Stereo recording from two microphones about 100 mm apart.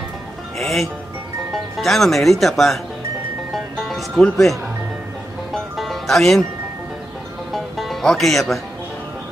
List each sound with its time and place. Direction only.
0.6 s speech: centre (ahead or behind)
3.5 s music: centre (ahead or behind)
7.5 s music: centre (ahead or behind)